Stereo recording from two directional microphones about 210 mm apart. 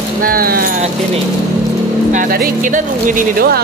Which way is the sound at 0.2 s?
45° right (ahead or behind).